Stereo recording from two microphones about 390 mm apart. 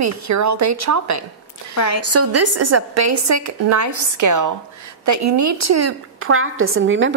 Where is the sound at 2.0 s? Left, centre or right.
Right.